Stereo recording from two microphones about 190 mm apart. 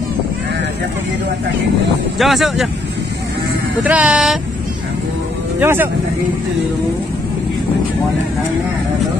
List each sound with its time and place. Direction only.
2.1 s speech: centre (ahead or behind)
3.8 s speech: 5° right (ahead or behind)
5.6 s speech: 10° right (ahead or behind)